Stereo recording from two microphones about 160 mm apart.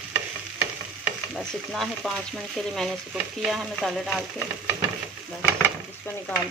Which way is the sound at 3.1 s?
Centre (ahead or behind).